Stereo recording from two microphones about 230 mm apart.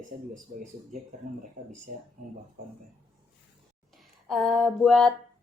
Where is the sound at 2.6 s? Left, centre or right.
Right.